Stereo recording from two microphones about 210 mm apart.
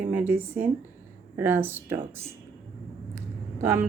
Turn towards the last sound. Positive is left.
turn(degrees=-10)  # may be behind; listen again after turning